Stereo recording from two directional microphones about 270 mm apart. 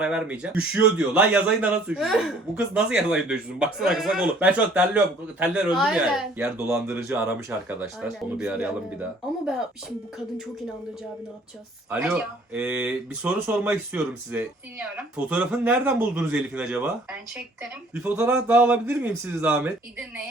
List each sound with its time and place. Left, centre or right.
0.0 s speech: centre
11.9 s speech: centre